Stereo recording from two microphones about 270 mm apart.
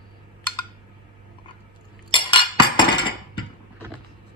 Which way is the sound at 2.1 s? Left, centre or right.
Centre.